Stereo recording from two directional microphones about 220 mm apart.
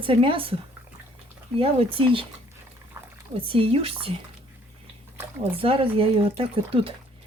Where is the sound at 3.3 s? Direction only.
25° right (ahead or behind).